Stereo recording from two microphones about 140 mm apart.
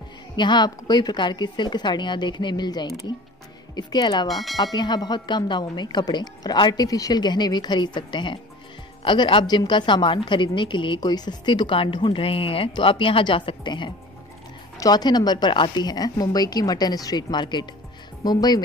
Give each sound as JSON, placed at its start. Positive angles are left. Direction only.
{"t": 0.4, "sound": "a woman's voice", "side_deg": 30}
{"t": 4.3, "sound": "speech", "side_deg": 0}
{"t": 4.7, "sound": "a woman's voice", "side_deg": 30}